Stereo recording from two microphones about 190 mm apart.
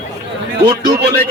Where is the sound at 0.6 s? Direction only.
60° right (ahead or behind).